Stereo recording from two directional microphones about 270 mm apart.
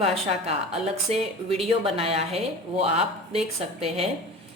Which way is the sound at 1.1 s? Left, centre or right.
Right.